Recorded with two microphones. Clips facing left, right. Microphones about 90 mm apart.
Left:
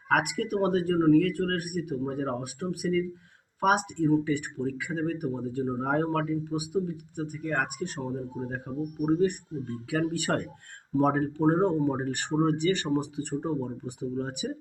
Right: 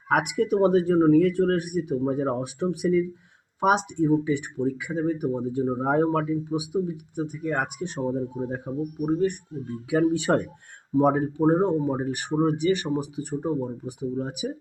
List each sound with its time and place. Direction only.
0.1 s speech: 20° right (ahead or behind)
9.0 s speech: centre (ahead or behind)
9.9 s speech: 20° right (ahead or behind)